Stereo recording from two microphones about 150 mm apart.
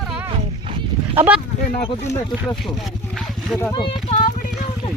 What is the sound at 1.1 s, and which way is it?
Speech, 15° right (ahead or behind).